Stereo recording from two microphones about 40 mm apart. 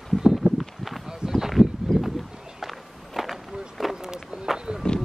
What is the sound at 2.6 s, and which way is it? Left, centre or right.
Walk, centre.